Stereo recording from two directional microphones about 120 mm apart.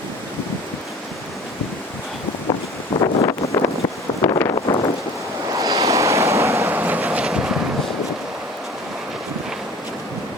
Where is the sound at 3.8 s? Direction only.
35° left (ahead or behind).